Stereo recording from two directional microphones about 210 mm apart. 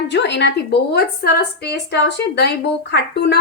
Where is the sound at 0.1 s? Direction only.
55° left (ahead or behind).